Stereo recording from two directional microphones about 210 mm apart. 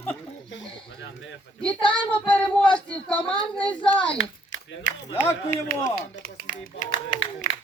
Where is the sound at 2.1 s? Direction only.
5° left (ahead or behind).